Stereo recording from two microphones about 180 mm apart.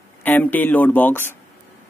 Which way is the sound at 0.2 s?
10° left (ahead or behind).